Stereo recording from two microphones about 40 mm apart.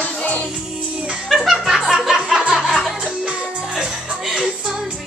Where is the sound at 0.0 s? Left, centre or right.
Left.